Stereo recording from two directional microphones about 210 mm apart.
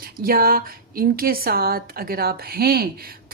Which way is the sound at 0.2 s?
45° right (ahead or behind).